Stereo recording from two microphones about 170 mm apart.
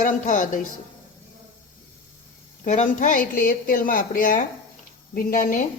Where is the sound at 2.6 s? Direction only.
45° left (ahead or behind).